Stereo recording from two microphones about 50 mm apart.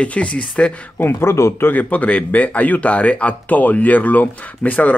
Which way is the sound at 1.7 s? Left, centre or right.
Left.